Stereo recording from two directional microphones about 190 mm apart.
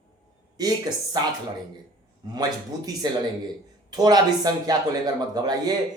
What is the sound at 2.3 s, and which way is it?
Speech, 20° right (ahead or behind).